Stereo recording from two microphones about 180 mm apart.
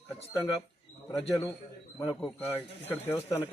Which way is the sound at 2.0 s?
15° left (ahead or behind).